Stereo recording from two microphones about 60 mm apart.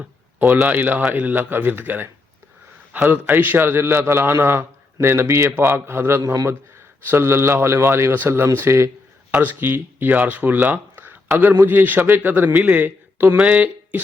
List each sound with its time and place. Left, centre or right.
0.3 s a man's voice: right
3.1 s a man's voice: right
9.3 s a man's voice: right